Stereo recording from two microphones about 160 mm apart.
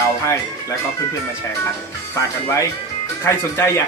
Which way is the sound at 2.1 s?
20° left (ahead or behind).